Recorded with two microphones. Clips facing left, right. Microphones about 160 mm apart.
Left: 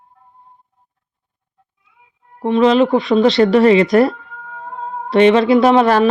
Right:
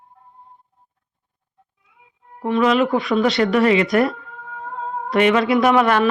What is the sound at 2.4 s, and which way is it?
Speech, 25° left (ahead or behind).